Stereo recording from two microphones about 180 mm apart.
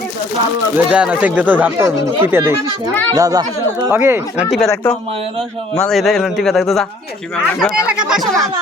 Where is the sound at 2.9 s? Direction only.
10° left (ahead or behind).